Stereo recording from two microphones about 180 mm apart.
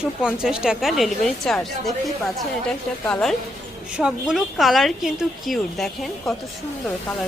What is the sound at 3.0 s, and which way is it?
Speech, 5° left (ahead or behind).